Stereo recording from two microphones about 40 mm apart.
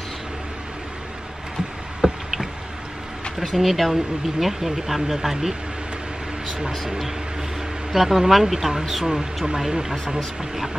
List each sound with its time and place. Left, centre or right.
2.0 s a sound: centre
3.3 s speech: centre
7.9 s speech: centre